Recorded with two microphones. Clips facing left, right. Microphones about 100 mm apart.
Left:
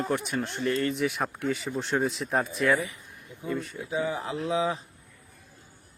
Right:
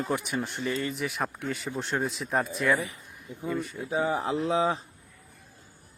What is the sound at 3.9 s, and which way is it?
Speech, 35° right (ahead or behind).